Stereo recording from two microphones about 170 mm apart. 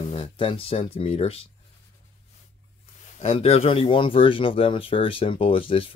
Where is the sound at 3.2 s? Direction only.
35° left (ahead or behind).